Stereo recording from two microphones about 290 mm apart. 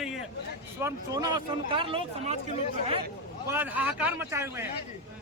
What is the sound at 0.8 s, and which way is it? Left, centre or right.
Speech, centre.